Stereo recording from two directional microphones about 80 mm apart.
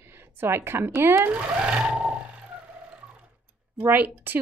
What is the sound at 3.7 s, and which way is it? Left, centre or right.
Speech, right.